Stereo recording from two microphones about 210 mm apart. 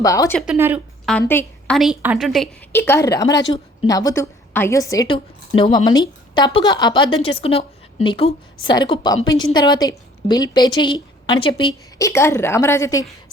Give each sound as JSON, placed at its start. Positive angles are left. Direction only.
{"t": 0.0, "sound": "a woman's voice", "side_deg": 15}
{"t": 0.3, "sound": "speech", "side_deg": -5}
{"t": 1.2, "sound": "a woman's voice", "side_deg": 10}
{"t": 3.3, "sound": "a woman's voice", "side_deg": 60}
{"t": 3.8, "sound": "a woman's voice", "side_deg": 15}